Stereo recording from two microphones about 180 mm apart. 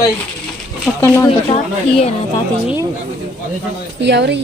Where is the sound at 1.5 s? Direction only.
35° left (ahead or behind).